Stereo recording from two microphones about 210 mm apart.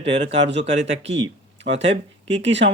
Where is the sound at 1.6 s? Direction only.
60° right (ahead or behind).